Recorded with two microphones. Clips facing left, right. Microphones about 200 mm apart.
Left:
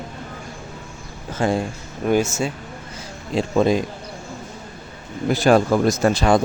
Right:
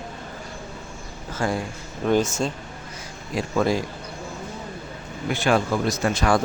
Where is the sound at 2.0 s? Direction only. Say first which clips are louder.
Left 2 dB; 10° left (ahead or behind).